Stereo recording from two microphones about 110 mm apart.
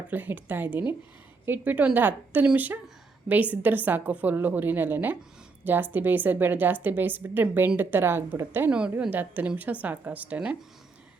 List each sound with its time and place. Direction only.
0.1 s a woman's voice: 15° right (ahead or behind)
8.7 s a woman's voice: 10° right (ahead or behind)